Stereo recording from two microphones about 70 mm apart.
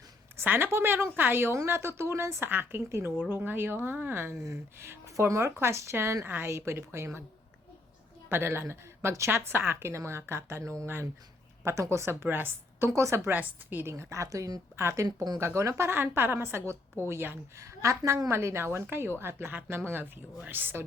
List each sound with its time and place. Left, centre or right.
0.4 s speech: right
8.3 s speech: right
12.9 s speech: right
13.2 s a woman's voice: right
13.9 s speech: right
14.8 s speech: right
15.0 s speech: right
15.4 s speech: right
17.6 s a woman's voice: right